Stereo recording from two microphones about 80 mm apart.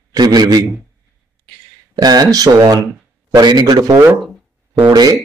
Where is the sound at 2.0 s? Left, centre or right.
Right.